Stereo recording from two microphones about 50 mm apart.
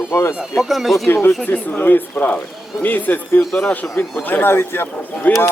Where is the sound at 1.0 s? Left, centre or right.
Left.